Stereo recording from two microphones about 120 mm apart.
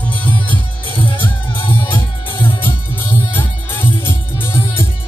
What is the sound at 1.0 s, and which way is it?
Music, 45° left (ahead or behind).